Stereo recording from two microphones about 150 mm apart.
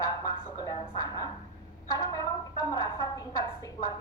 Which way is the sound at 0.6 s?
25° left (ahead or behind).